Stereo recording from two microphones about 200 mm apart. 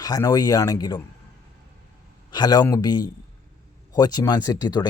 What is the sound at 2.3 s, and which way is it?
Speech, 20° left (ahead or behind).